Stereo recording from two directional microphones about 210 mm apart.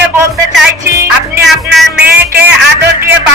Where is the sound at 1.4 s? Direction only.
Centre (ahead or behind).